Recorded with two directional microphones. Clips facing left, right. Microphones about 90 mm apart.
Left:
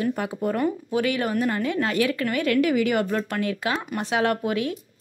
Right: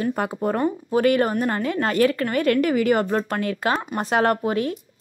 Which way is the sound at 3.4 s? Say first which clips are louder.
Right 3 dB; 45° right (ahead or behind).